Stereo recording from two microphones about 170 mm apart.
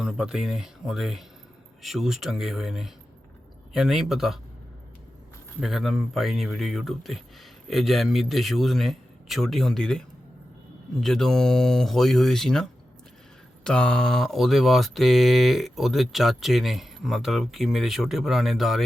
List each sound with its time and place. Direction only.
0.0 s mantra: 5° right (ahead or behind)
5.5 s mantra: centre (ahead or behind)
11.0 s mantra: 5° left (ahead or behind)
13.7 s mantra: 5° left (ahead or behind)